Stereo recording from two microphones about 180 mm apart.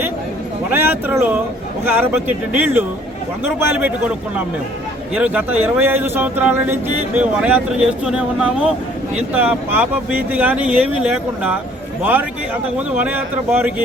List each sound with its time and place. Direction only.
0.7 s speech: 10° right (ahead or behind)
5.1 s speech: 5° right (ahead or behind)
13.0 s speech: 10° right (ahead or behind)